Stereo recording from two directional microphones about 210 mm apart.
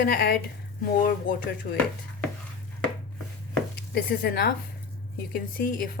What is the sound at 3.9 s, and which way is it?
A woman's voice, 45° left (ahead or behind).